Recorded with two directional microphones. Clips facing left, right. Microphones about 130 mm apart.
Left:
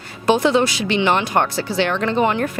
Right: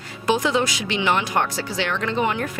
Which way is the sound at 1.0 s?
30° left (ahead or behind).